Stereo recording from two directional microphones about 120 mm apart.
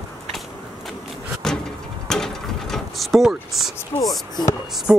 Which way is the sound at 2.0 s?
5° left (ahead or behind).